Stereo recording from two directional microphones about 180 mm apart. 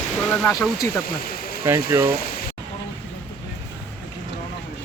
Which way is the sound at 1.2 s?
55° left (ahead or behind).